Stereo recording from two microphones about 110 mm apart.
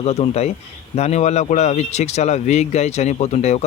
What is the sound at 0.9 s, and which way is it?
Speech, 85° left.